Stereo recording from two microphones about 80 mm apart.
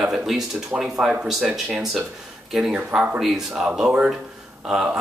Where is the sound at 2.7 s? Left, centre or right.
Centre.